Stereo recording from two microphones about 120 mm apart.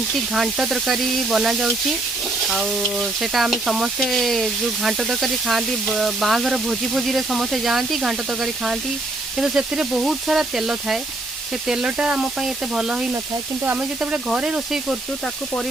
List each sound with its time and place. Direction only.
0.3 s speech: 5° right (ahead or behind)